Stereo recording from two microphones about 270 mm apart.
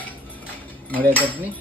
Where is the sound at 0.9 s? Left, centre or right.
Centre.